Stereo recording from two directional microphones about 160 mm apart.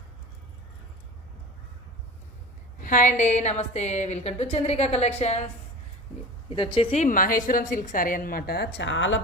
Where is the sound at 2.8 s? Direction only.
55° left (ahead or behind).